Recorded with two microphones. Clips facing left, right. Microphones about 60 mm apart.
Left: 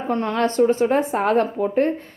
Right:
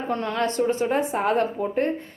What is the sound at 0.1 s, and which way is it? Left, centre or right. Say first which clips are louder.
A woman's voice: left 4 dB; left.